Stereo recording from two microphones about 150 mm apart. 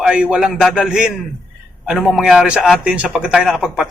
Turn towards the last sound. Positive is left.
turn(degrees=-5)  # may be behind; listen again after turning